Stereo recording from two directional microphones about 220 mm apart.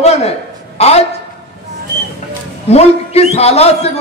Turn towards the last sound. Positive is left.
turn(degrees=30)  # may be behind; listen again after turning